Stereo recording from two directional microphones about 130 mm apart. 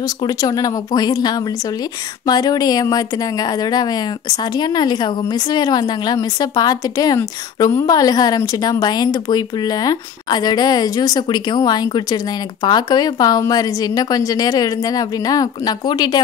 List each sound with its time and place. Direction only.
0.2 s a woman's voice: 30° left (ahead or behind)